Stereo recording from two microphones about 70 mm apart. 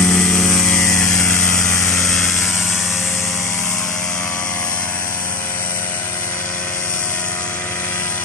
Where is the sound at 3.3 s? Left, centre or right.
Centre.